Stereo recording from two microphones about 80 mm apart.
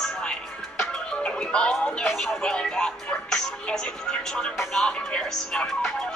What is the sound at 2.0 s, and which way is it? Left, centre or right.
Speech, centre.